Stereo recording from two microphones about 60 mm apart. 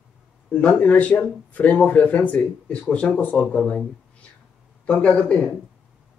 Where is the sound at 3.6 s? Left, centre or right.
Centre.